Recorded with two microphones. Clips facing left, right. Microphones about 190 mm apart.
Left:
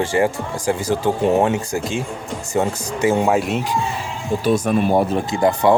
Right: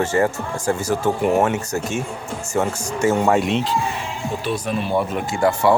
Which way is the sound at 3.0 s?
15° left (ahead or behind).